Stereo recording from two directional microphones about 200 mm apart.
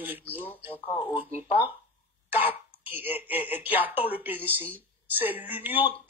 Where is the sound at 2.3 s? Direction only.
10° right (ahead or behind).